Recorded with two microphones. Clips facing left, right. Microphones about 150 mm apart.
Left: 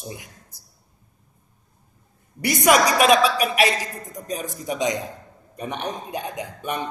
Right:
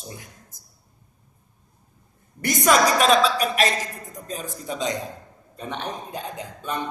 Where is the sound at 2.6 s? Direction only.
10° left (ahead or behind).